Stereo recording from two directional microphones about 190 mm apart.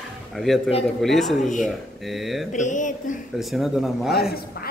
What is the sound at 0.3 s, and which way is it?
Speech, centre (ahead or behind).